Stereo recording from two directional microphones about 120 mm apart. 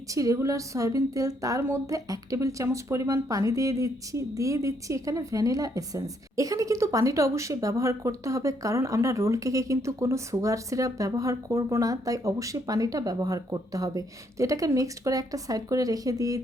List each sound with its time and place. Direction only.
0.1 s a woman's voice: 30° right (ahead or behind)